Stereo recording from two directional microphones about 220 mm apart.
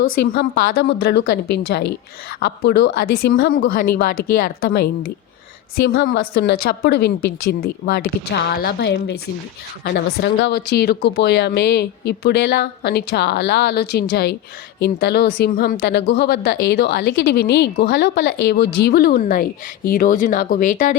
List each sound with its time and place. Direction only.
0.5 s a woman's voice: 40° left (ahead or behind)